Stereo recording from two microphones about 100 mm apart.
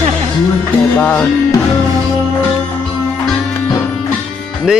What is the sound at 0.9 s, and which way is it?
Speech, 15° left (ahead or behind).